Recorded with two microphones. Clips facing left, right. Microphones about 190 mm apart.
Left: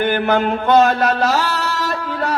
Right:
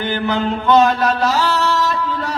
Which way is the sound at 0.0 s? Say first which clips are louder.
Left 3 dB; 55° left (ahead or behind).